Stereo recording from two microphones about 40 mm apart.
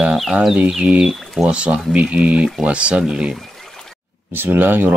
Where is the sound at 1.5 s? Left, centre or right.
Right.